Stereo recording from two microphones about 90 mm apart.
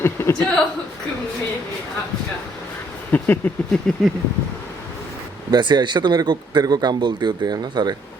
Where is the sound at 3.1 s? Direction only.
20° left (ahead or behind).